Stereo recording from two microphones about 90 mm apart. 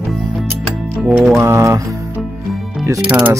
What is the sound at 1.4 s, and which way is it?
Speech, 30° right (ahead or behind).